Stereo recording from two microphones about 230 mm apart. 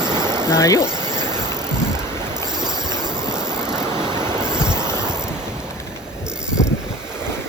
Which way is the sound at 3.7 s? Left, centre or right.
Centre.